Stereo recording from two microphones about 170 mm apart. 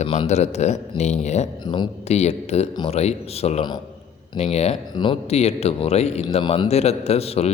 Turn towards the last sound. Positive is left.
turn(degrees=35)  # may be behind; listen again after turning